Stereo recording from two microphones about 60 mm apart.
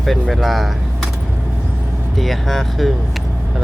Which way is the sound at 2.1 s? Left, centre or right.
Centre.